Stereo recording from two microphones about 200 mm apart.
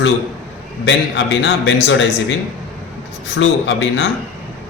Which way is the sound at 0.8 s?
65° left (ahead or behind).